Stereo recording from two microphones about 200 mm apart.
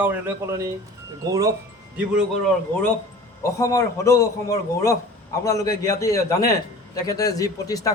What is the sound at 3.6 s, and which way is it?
A man's voice, 15° left (ahead or behind).